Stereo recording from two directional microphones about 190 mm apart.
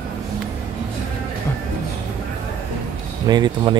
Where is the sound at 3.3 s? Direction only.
20° right (ahead or behind).